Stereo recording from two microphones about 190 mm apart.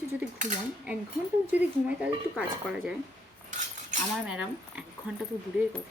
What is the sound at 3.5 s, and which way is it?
Cutlery, 40° right (ahead or behind).